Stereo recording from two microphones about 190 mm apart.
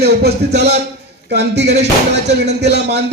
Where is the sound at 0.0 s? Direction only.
60° right (ahead or behind).